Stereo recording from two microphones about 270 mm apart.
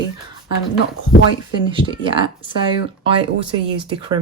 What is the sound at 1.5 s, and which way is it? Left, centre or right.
Speech, centre.